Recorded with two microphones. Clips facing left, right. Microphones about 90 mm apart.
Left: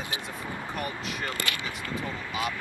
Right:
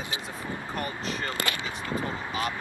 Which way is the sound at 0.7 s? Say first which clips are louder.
Right 2 dB; 5° left (ahead or behind).